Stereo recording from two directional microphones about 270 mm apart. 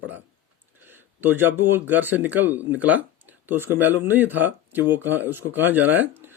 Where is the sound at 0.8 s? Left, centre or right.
Centre.